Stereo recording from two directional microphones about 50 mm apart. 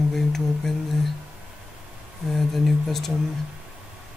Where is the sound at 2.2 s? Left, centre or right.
Centre.